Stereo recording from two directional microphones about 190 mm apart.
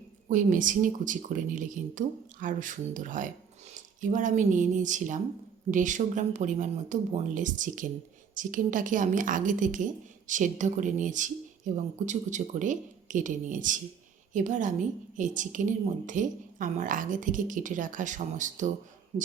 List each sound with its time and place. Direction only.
0.3 s a woman's voice: 45° right (ahead or behind)